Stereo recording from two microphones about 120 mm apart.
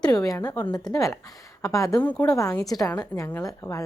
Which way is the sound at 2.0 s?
10° left (ahead or behind).